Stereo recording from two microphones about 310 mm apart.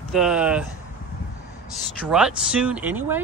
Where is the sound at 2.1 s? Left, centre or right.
Centre.